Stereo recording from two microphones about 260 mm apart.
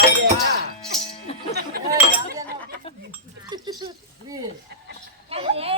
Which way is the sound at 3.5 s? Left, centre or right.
Centre.